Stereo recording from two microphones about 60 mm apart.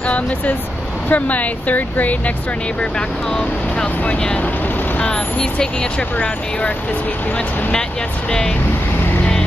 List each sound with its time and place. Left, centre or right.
1.0 s speech: left
3.3 s speech: left
8.3 s speech: centre